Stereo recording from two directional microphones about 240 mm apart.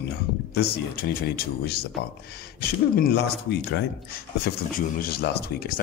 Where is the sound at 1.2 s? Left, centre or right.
Left.